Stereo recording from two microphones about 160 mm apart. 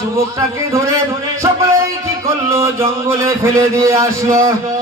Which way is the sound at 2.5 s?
15° right (ahead or behind).